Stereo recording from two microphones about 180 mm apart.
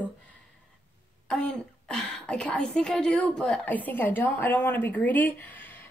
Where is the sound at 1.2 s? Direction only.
5° left (ahead or behind).